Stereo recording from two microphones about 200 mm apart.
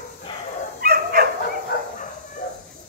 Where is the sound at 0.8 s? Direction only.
50° right (ahead or behind).